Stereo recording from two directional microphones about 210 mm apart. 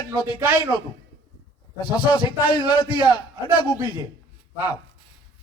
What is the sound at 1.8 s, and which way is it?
A man's voice, 20° left (ahead or behind).